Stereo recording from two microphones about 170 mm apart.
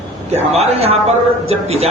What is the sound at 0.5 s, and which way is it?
A man's voice, 35° right (ahead or behind).